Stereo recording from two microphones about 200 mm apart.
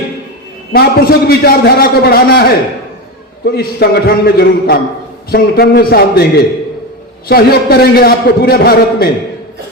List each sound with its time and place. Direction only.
0.7 s a man's voice: 50° left (ahead or behind)